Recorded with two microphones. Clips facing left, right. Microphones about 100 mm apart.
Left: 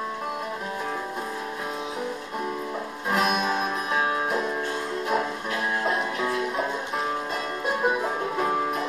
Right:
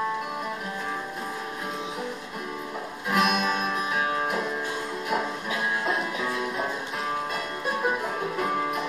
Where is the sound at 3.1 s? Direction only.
30° left (ahead or behind).